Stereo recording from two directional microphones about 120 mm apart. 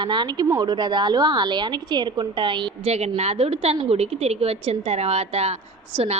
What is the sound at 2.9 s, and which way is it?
Speech, 65° right (ahead or behind).